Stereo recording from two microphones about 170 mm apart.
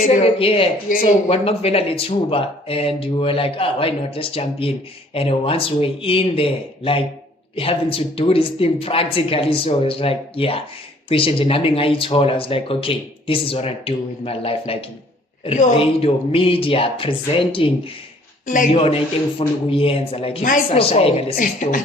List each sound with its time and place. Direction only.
0.2 s speech: 35° left (ahead or behind)
0.9 s a woman's voice: 50° left (ahead or behind)
1.3 s speech: 35° left (ahead or behind)
15.4 s a woman's voice: 50° left (ahead or behind)
15.8 s speech: 35° left (ahead or behind)
18.4 s a woman's voice: 50° left (ahead or behind)
18.7 s speech: 35° left (ahead or behind)
21.3 s a woman's voice: 50° left (ahead or behind)